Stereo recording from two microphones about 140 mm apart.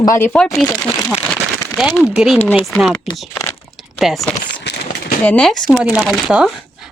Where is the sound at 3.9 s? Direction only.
Centre (ahead or behind).